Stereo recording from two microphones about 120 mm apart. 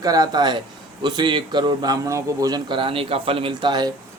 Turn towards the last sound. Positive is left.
turn(degrees=-35)  # may be behind; listen again after turning